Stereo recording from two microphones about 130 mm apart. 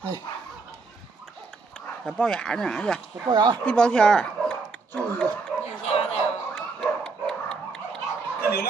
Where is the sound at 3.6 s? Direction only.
5° left (ahead or behind).